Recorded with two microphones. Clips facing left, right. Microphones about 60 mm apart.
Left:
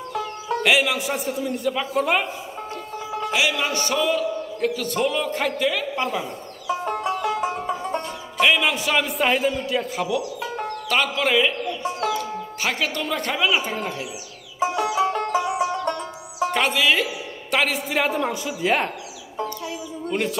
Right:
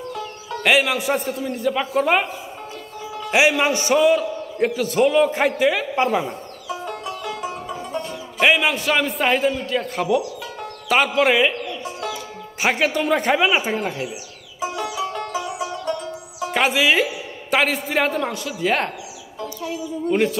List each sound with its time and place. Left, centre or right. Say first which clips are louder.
0.7 s a man's voice: right 3 dB; centre
3.3 s a man's voice: right 7 dB; right
6.7 s music: left 5 dB; left
8.5 s a man's voice: right 3 dB; centre
10.4 s music: left 4 dB; left
10.9 s a man's voice: right 5 dB; centre
12.5 s a man's voice: right 6 dB; centre
14.6 s music: left 4 dB; left
16.5 s a sound: right 4 dB; centre
18.6 s a man's voice: right 1 dB; centre
20.1 s a man's voice: right 5 dB; centre